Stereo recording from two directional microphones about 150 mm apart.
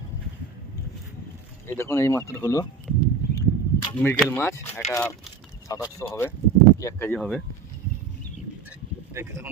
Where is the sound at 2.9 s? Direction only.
5° left (ahead or behind).